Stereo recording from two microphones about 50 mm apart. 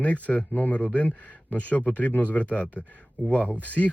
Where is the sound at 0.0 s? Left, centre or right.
Left.